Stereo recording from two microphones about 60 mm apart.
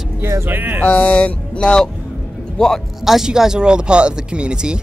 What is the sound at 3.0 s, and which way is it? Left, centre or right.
Speech, centre.